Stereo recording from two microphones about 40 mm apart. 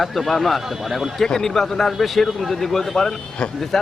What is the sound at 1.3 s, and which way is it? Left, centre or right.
A man's voice, centre.